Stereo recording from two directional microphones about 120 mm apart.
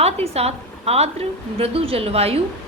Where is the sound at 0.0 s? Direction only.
60° right (ahead or behind).